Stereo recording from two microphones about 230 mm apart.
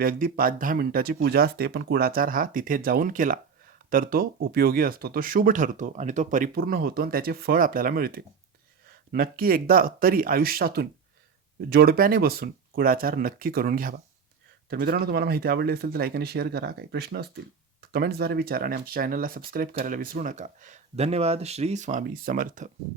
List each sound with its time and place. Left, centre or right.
0.0 s speech: right